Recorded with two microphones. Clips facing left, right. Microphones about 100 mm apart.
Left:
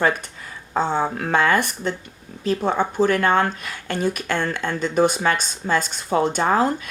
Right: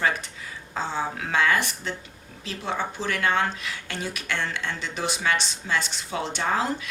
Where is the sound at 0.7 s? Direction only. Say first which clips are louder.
Left 8 dB; 55° left (ahead or behind).